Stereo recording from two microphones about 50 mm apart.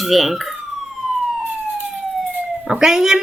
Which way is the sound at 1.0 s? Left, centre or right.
Centre.